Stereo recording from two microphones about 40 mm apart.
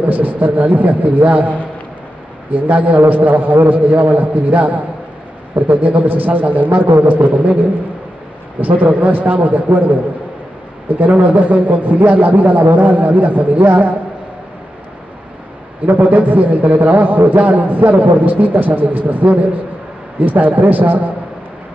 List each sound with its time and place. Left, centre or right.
0.0 s a man's voice: right
3.0 s a man's voice: right
8.5 s a man's voice: right
11.0 s a man's voice: right
15.8 s a man's voice: right